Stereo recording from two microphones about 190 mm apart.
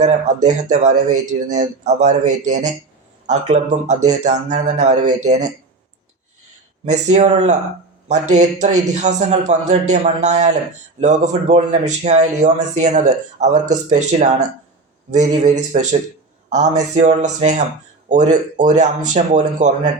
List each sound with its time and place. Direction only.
0.0 s a man's voice: 40° right (ahead or behind)
6.9 s a man's voice: 35° right (ahead or behind)